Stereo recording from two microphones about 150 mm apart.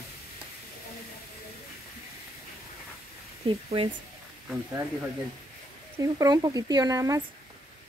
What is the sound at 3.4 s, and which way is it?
Speech, 40° right (ahead or behind).